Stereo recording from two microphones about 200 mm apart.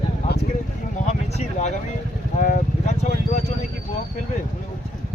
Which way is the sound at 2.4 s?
40° left (ahead or behind).